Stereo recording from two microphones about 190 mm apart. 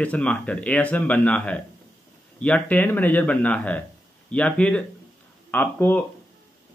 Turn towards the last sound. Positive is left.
turn(degrees=10)  # may be behind; listen again after turning